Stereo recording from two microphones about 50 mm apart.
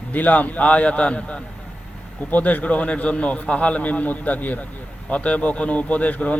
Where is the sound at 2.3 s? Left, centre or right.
Left.